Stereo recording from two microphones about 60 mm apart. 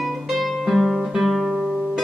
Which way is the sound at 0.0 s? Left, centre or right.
Centre.